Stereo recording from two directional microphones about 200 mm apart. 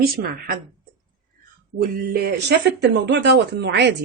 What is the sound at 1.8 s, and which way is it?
Speech, 55° right (ahead or behind).